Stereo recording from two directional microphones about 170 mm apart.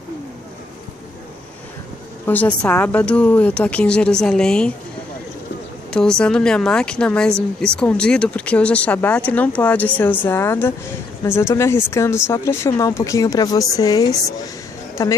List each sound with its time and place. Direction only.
2.2 s a woman's voice: 10° left (ahead or behind)
5.9 s a woman's voice: 5° left (ahead or behind); by 14.5 s 20° left (ahead or behind)